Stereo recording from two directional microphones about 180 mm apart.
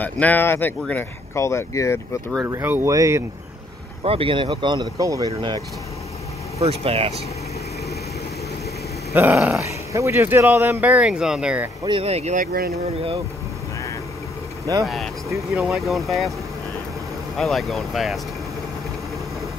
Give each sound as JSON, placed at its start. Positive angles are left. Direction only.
{"t": 0.0, "sound": "speech", "side_deg": 10}
{"t": 2.4, "sound": "speech", "side_deg": -10}
{"t": 4.0, "sound": "speech", "side_deg": -30}
{"t": 6.6, "sound": "speech", "side_deg": -35}
{"t": 9.1, "sound": "speech", "side_deg": -10}
{"t": 11.8, "sound": "speech", "side_deg": -30}
{"t": 14.9, "sound": "speech", "side_deg": 0}
{"t": 17.4, "sound": "speech", "side_deg": 0}